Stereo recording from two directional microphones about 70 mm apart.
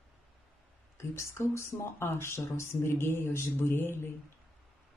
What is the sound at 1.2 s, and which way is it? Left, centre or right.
Speech, left.